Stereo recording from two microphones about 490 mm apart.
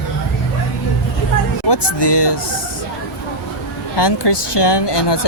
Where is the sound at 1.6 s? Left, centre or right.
Left.